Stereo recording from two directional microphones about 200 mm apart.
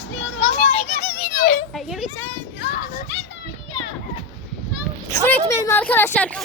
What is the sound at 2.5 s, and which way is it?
Children playing, 50° left (ahead or behind).